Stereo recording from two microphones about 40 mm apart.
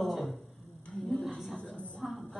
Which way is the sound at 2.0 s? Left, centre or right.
Centre.